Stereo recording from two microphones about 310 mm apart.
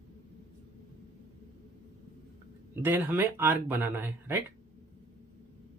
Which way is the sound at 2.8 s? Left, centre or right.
Centre.